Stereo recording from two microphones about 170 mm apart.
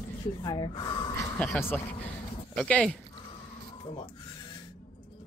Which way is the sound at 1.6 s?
10° left (ahead or behind).